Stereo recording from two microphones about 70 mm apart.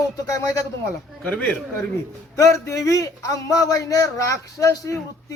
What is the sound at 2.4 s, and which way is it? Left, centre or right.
A man's voice, left.